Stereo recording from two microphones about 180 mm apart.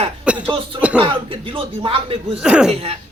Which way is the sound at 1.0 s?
30° right (ahead or behind).